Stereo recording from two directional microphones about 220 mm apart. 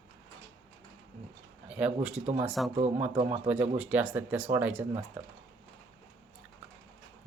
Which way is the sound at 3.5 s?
5° right (ahead or behind).